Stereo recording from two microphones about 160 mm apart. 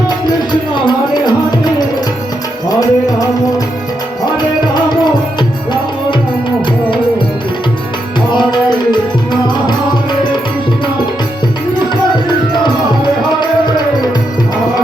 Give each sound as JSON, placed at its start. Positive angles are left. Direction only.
{"t": 0.3, "sound": "music", "side_deg": 25}
{"t": 4.4, "sound": "music", "side_deg": 25}
{"t": 8.3, "sound": "tabla", "side_deg": 30}
{"t": 12.6, "sound": "music", "side_deg": 30}